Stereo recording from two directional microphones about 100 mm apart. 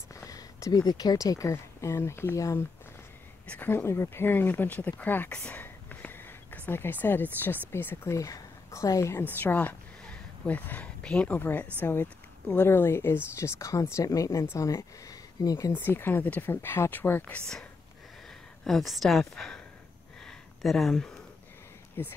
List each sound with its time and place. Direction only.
0.1 s speech: 35° left (ahead or behind)
3.4 s speech: 20° left (ahead or behind)
5.4 s a sound: 15° left (ahead or behind)
7.7 s a woman's voice: 25° left (ahead or behind)
9.4 s speech: 20° left (ahead or behind); by 15.7 s 35° left (ahead or behind)
15.8 s a woman's voice: 20° left (ahead or behind); by 19.6 s 5° left (ahead or behind)
20.2 s a sound: 5° left (ahead or behind)
22.0 s speech: 20° left (ahead or behind)